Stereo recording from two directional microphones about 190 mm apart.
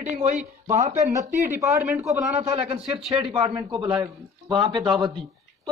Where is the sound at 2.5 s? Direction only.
35° right (ahead or behind).